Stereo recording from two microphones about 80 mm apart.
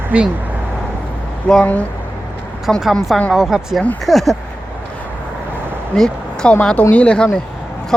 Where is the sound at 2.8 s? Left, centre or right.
Centre.